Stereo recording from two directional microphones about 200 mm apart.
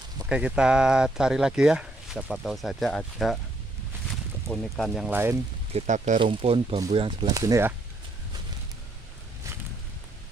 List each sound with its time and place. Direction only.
0.3 s speech: 5° right (ahead or behind)
4.5 s speech: centre (ahead or behind)
5.7 s speech: 35° right (ahead or behind); by 7.7 s 15° right (ahead or behind)